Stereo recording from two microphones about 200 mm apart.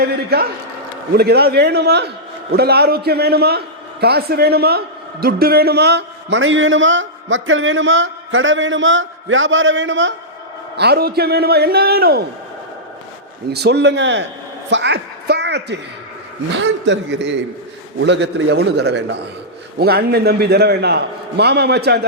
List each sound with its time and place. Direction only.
0.0 s a man's voice: 50° right (ahead or behind)
10.8 s a man's voice: 55° right (ahead or behind)
13.5 s a man's voice: 55° right (ahead or behind)